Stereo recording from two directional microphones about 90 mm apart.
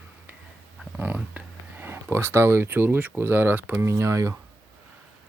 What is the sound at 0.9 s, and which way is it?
Speech, 20° right (ahead or behind).